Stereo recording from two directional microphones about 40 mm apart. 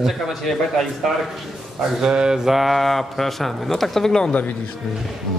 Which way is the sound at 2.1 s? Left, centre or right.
Right.